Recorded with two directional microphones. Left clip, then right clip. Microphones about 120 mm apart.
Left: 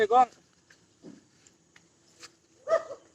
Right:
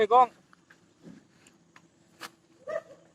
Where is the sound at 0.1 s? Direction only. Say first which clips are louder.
Right 3 dB; 40° left (ahead or behind).